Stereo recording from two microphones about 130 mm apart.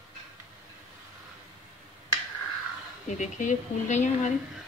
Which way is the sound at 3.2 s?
70° left (ahead or behind).